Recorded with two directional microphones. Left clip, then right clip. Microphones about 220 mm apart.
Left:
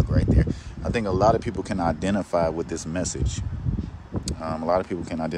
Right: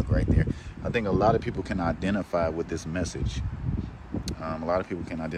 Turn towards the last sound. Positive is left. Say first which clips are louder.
# left 5 dB
turn(degrees=15)  # may be behind; listen again after turning